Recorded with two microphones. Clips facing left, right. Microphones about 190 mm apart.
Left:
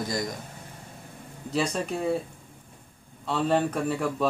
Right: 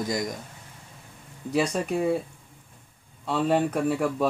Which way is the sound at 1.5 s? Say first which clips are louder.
Right 2 dB; 5° right (ahead or behind).